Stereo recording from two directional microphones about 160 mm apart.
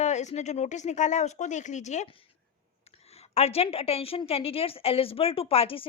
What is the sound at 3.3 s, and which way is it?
A woman's voice, 40° left (ahead or behind).